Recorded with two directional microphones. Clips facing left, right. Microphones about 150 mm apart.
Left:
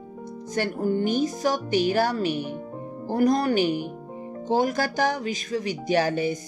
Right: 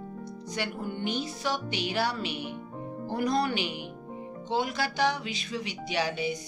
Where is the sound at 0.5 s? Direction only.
45° left (ahead or behind).